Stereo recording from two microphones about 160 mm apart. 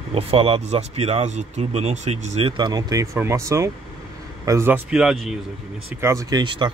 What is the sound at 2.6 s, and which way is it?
Speech, 25° right (ahead or behind).